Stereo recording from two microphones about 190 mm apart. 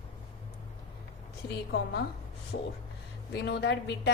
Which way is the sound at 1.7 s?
60° left (ahead or behind).